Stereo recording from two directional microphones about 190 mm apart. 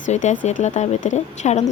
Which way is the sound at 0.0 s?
40° left (ahead or behind).